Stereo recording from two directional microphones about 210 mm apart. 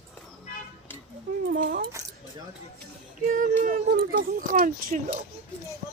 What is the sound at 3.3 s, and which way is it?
Speech, 40° right (ahead or behind).